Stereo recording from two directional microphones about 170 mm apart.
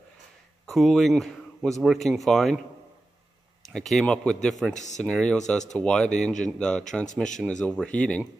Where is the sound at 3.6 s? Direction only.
Centre (ahead or behind).